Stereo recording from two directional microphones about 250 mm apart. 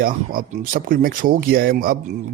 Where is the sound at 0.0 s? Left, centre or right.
Right.